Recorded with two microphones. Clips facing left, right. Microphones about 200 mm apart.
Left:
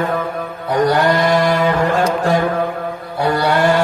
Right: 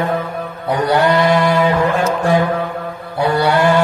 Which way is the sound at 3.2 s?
55° left (ahead or behind).